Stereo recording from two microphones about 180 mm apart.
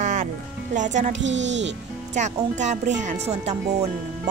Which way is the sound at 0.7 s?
45° right (ahead or behind).